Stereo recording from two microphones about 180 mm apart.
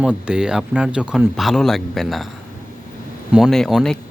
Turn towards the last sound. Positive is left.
turn(degrees=0)  # may be behind; listen again after turning